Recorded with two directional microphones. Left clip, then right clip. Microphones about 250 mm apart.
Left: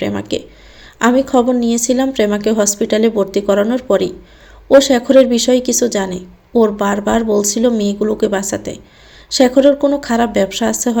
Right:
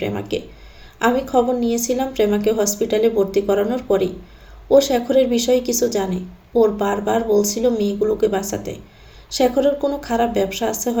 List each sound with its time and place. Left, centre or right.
0.0 s a woman's voice: left